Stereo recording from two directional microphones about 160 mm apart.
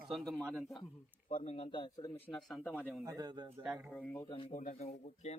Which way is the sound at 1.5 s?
35° left (ahead or behind).